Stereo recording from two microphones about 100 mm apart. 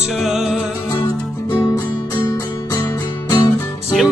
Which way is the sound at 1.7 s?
40° left (ahead or behind).